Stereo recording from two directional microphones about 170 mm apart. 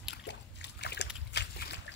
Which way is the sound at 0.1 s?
90° left.